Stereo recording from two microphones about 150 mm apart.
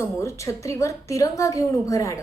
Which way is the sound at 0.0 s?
20° left (ahead or behind).